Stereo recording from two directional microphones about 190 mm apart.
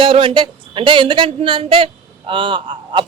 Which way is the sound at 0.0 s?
30° right (ahead or behind).